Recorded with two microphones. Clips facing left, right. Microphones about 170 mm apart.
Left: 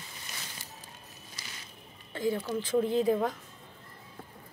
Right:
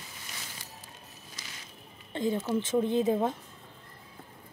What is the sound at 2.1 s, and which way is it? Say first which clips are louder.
A woman's voice: right 2 dB; 20° right (ahead or behind).